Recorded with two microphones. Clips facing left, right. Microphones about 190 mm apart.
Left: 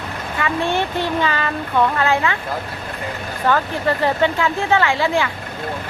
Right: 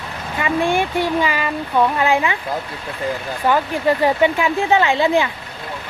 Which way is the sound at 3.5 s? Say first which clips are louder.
Right 2 dB; 15° right (ahead or behind).